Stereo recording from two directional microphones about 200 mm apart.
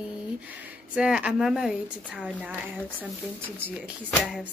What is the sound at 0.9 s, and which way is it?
A woman's voice, 5° right (ahead or behind).